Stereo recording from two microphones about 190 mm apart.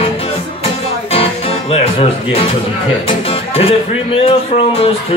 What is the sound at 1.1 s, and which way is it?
Music, 30° left (ahead or behind).